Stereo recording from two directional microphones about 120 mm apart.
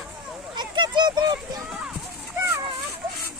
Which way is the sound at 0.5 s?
40° right (ahead or behind).